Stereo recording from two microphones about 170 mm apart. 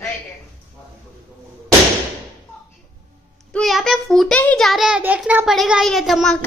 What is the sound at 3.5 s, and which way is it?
Child singing, centre (ahead or behind).